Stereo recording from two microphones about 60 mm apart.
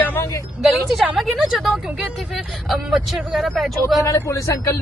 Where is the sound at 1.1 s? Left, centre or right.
Centre.